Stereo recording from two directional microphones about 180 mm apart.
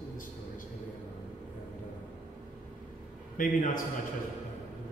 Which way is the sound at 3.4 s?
50° left (ahead or behind).